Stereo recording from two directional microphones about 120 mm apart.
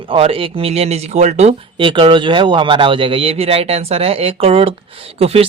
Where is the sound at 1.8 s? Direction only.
45° right (ahead or behind).